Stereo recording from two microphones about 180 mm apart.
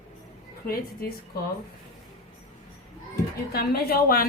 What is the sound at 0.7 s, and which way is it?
Speech, 55° left (ahead or behind).